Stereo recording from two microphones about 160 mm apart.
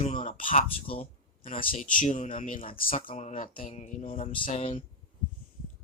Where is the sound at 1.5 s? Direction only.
55° left (ahead or behind).